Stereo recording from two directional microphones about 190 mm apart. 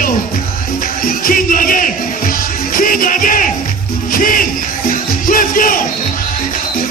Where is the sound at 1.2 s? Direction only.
50° left (ahead or behind).